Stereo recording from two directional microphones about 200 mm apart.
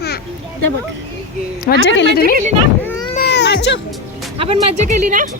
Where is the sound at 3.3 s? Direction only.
55° left (ahead or behind).